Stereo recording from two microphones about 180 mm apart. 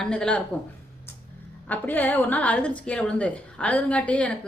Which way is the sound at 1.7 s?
10° left (ahead or behind).